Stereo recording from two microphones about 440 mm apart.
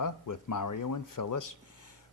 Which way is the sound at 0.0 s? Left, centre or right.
Left.